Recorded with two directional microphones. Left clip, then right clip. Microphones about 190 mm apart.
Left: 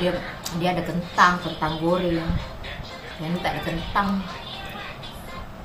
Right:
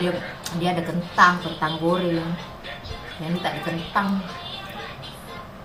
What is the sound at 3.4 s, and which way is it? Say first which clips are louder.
Speech: even; centre (ahead or behind).